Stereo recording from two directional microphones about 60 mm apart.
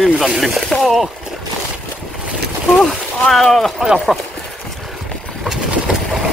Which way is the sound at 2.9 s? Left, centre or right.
Centre.